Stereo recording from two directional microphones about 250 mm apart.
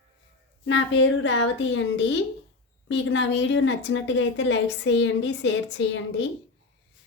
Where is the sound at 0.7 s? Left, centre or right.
Left.